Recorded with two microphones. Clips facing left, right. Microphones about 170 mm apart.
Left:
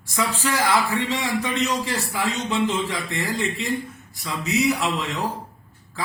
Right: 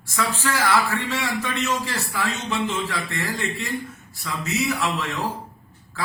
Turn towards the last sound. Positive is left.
turn(degrees=15)  # may be behind; listen again after turning